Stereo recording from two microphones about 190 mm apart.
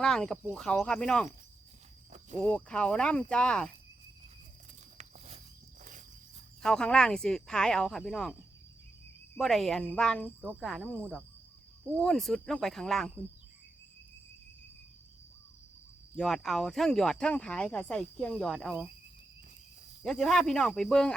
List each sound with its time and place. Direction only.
0.0 s speech: 5° left (ahead or behind)
2.4 s speech: 5° left (ahead or behind)
4.9 s walk: 35° right (ahead or behind)
6.6 s speech: 5° left (ahead or behind)
16.1 s speech: centre (ahead or behind)
20.0 s speech: centre (ahead or behind)